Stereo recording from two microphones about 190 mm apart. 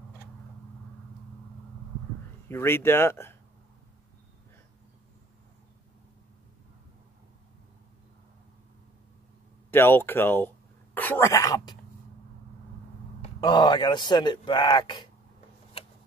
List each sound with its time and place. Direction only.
2.4 s speech: 10° left (ahead or behind)
9.7 s speech: 10° left (ahead or behind)
13.4 s speech: 20° left (ahead or behind)